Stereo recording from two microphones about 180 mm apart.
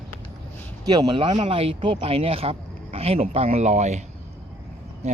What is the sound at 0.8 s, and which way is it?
Speech, 20° right (ahead or behind).